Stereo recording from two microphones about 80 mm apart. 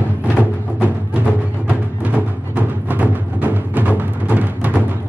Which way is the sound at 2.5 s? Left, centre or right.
Right.